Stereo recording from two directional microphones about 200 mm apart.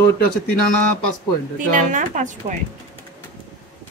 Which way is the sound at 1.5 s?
40° right (ahead or behind).